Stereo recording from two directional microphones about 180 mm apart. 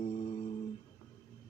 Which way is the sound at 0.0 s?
35° left (ahead or behind).